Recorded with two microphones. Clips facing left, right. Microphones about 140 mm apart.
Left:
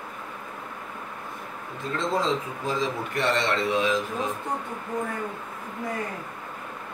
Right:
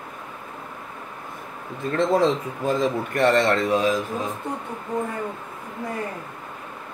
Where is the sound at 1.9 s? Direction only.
60° right (ahead or behind); by 4.0 s 40° right (ahead or behind).